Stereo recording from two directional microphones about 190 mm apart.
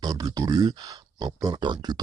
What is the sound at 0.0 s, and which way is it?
Speech, 20° right (ahead or behind).